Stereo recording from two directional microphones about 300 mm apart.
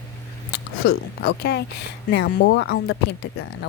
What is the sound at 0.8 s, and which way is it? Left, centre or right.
Speech, left.